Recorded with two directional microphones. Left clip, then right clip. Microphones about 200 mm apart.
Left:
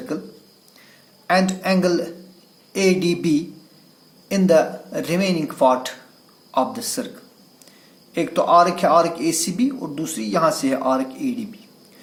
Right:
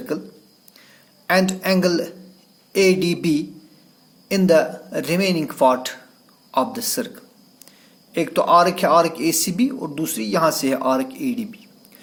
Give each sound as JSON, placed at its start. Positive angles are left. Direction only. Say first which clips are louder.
{"t": 1.3, "sound": "a man's voice", "louder": "even", "side_deg": -40}